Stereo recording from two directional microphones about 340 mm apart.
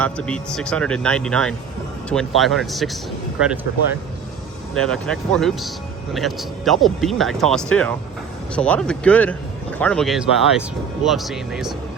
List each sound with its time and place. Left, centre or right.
0.0 s speech: centre
4.7 s speech: centre